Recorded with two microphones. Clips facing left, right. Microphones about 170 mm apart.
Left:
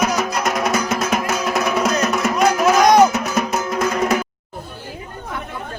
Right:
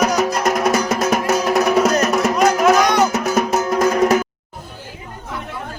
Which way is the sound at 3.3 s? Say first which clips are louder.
Right 4 dB; 40° right (ahead or behind).